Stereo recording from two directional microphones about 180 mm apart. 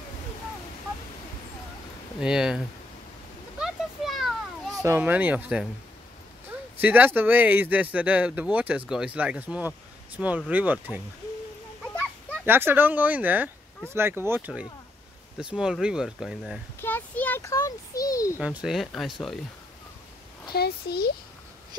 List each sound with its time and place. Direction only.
2.1 s speech: 5° right (ahead or behind)
3.5 s a sound: centre (ahead or behind)
4.8 s speech: 10° right (ahead or behind)
6.8 s speech: 10° right (ahead or behind)
12.4 s speech: 10° right (ahead or behind)
16.8 s a child's voice: 10° left (ahead or behind)
18.4 s speech: 5° right (ahead or behind)
20.5 s a child's voice: 60° left (ahead or behind)